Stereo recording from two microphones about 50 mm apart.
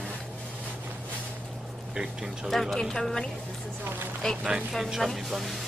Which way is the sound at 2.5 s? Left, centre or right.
Centre.